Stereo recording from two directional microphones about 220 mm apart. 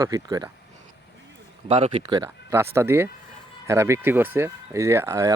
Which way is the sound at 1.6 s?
25° right (ahead or behind).